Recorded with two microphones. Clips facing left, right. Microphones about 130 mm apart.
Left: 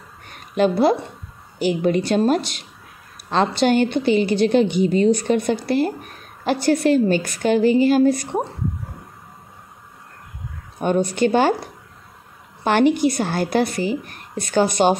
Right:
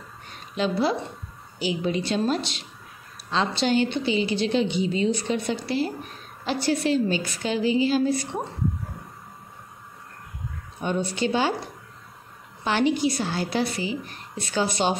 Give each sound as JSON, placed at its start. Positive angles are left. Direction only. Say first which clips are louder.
{"t": 0.3, "sound": "a sound", "louder": "left 8 dB", "side_deg": 50}
{"t": 1.6, "sound": "a woman's voice", "louder": "left 7 dB", "side_deg": 55}
{"t": 10.8, "sound": "a woman's voice", "louder": "left 7 dB", "side_deg": 50}
{"t": 12.6, "sound": "a woman's voice", "louder": "left 6 dB", "side_deg": 55}